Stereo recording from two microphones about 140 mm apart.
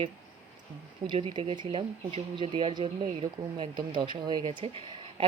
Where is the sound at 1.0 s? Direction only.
35° right (ahead or behind).